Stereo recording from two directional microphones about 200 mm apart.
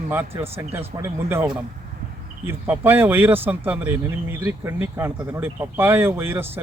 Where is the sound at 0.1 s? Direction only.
10° right (ahead or behind).